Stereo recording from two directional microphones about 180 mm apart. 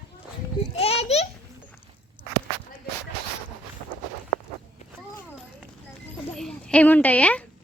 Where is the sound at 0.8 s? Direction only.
35° left (ahead or behind).